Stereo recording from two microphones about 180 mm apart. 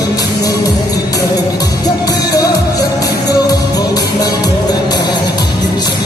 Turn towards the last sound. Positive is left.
turn(degrees=25)  # may be behind; listen again after turning